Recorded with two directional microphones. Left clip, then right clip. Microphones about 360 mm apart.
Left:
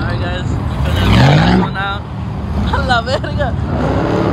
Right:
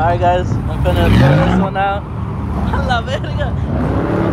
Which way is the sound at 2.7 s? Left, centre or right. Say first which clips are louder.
Left 4 dB; centre.